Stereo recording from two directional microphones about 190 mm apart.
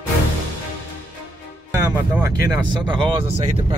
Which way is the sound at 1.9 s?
15° right (ahead or behind).